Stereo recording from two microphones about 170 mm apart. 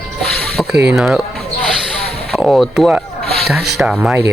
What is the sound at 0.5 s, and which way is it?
Speech, 5° right (ahead or behind).